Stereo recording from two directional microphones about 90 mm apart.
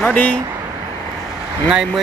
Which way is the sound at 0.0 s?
15° left (ahead or behind).